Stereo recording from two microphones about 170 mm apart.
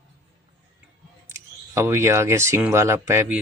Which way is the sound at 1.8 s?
15° right (ahead or behind).